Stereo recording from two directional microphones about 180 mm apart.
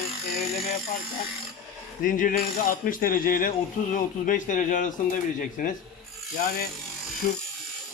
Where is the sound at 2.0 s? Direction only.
45° left (ahead or behind).